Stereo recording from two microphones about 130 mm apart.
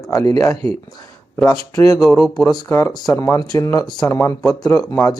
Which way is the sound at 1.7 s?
25° left (ahead or behind).